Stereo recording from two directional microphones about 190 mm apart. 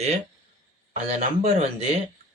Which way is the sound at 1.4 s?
35° right (ahead or behind).